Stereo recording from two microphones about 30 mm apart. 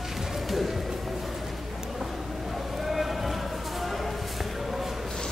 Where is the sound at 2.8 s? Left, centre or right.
Centre.